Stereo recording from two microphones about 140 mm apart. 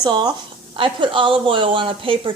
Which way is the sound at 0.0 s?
30° right (ahead or behind).